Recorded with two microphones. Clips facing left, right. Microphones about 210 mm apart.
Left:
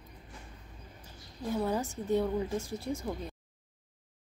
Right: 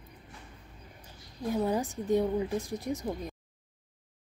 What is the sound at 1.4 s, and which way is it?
A woman's voice, 15° right (ahead or behind).